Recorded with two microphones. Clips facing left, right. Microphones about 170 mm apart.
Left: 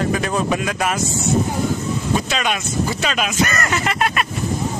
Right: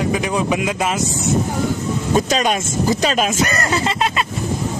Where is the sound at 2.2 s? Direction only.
40° right (ahead or behind).